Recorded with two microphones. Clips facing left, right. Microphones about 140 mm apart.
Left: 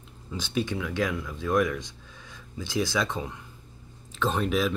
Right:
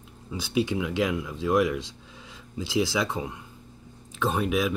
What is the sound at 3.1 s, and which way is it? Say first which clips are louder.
Speech: right 2 dB; 10° right (ahead or behind).